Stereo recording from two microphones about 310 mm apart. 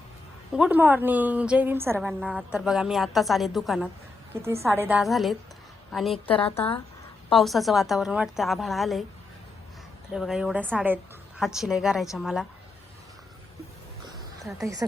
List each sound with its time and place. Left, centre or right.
0.5 s a woman's voice: centre
6.4 s speech: centre
7.3 s a woman's voice: centre
10.1 s a woman's voice: centre
14.6 s speech: centre